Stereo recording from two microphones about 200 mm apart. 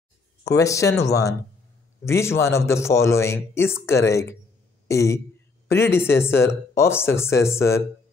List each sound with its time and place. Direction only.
0.5 s a man's voice: 15° left (ahead or behind)